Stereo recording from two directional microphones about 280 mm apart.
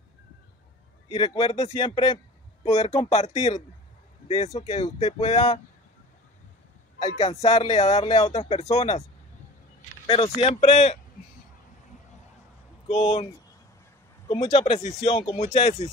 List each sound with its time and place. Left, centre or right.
1.1 s speech: centre
7.0 s speech: left
10.0 s speech: centre
12.8 s speech: left